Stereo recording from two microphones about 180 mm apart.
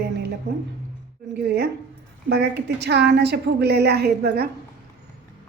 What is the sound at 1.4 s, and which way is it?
A woman's voice, 65° right (ahead or behind).